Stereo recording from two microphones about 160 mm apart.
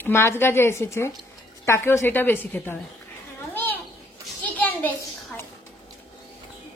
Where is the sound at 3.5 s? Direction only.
10° left (ahead or behind).